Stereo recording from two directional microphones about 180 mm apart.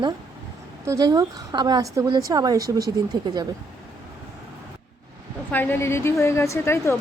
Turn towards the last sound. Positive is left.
turn(degrees=15)  # may be behind; listen again after turning